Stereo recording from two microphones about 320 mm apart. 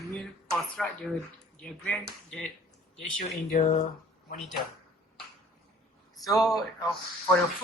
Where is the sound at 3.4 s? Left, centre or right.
Left.